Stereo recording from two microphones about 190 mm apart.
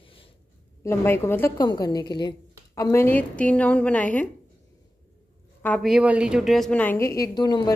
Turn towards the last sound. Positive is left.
turn(degrees=20)  # may be behind; listen again after turning